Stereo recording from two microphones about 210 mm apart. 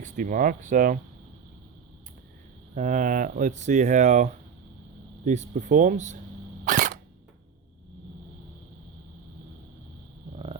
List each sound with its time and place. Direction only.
0.0 s speech: 40° right (ahead or behind)
2.7 s speech: 35° right (ahead or behind)
6.7 s camera: 40° right (ahead or behind)
10.3 s wild animals: 25° right (ahead or behind)